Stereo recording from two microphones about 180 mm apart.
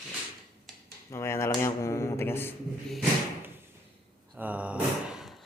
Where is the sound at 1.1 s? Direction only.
15° left (ahead or behind).